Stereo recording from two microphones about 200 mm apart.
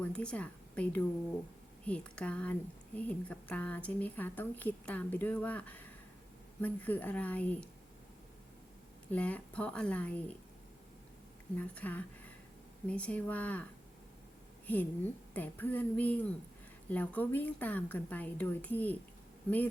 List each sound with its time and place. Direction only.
0.0 s speech: 5° left (ahead or behind)
9.1 s speech: 5° left (ahead or behind)
11.5 s speech: 5° left (ahead or behind)
14.7 s speech: 10° left (ahead or behind)